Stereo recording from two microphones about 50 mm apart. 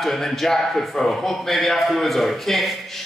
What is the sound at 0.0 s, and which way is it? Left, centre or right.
Speech, centre.